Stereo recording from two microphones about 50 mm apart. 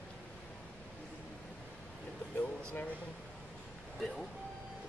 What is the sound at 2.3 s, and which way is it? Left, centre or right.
Air conditioning, left.